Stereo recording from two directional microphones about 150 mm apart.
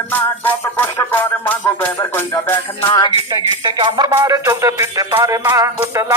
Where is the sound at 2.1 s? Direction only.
15° left (ahead or behind).